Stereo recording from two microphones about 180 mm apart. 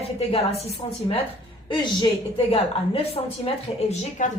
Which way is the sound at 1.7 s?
25° left (ahead or behind).